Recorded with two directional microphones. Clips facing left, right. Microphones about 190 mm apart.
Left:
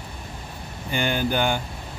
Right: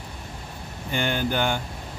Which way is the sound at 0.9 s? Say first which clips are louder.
Left 1 dB; 10° left (ahead or behind).